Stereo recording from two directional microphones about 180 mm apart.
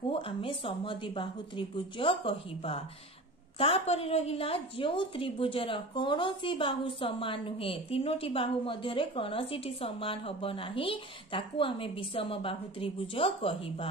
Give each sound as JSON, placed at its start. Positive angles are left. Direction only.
{"t": 0.1, "sound": "a woman's voice", "side_deg": 30}